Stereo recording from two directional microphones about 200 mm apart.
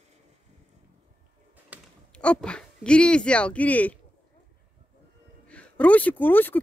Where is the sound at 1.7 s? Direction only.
5° right (ahead or behind).